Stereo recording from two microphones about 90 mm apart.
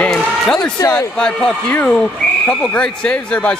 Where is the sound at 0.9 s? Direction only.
20° left (ahead or behind).